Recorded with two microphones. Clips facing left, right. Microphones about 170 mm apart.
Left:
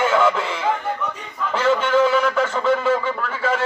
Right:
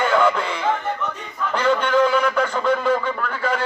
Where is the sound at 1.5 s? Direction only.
5° left (ahead or behind).